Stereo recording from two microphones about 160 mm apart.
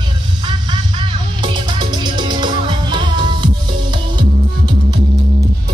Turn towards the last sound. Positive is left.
turn(degrees=-30)  # may be behind; listen again after turning